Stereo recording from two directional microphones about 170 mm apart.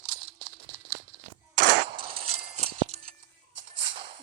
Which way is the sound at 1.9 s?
35° right (ahead or behind).